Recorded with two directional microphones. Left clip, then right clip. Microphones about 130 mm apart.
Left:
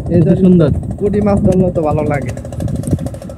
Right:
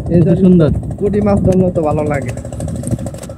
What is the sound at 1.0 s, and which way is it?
Speech, 90° left.